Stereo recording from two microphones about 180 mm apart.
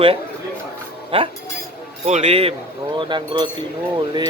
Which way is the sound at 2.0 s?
40° right (ahead or behind).